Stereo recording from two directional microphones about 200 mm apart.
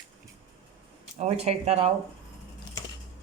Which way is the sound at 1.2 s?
30° right (ahead or behind).